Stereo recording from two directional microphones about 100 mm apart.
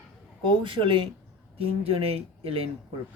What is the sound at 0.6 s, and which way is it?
Speech, 60° right (ahead or behind).